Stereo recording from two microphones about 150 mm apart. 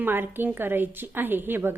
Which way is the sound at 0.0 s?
15° right (ahead or behind).